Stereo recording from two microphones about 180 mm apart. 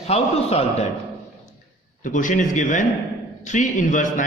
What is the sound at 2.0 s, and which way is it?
A man's voice, 45° left (ahead or behind).